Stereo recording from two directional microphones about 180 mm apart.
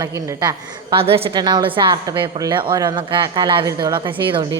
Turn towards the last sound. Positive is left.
turn(degrees=-25)  # may be behind; listen again after turning